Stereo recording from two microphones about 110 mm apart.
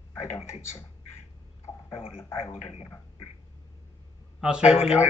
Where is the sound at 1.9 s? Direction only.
60° left (ahead or behind).